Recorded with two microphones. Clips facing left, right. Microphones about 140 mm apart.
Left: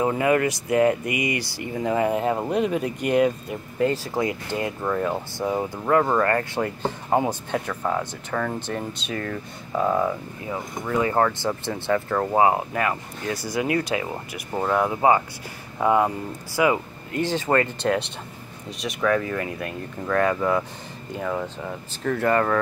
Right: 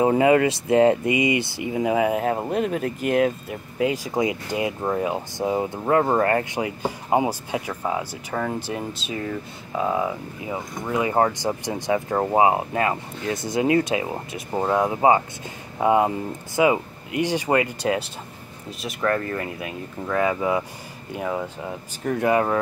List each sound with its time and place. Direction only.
0.0 s speech: 25° right (ahead or behind); by 3.9 s centre (ahead or behind)
3.9 s speech: 15° right (ahead or behind)
6.6 s speech: 10° right (ahead or behind)
10.5 s speech: 20° right (ahead or behind)